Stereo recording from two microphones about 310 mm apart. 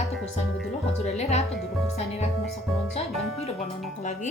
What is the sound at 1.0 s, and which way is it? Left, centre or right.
Speech, left.